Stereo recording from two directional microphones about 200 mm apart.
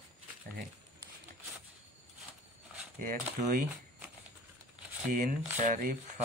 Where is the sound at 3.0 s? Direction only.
40° right (ahead or behind).